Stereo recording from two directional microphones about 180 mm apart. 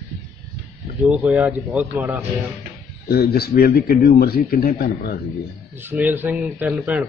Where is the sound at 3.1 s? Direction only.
60° left (ahead or behind).